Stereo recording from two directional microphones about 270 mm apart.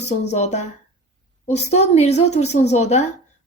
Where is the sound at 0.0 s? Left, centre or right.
Left.